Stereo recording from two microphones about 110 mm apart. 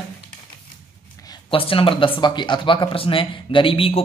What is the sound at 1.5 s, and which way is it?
Speech, 55° left (ahead or behind).